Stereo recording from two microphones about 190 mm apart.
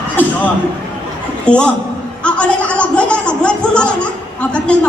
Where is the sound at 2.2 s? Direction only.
5° left (ahead or behind).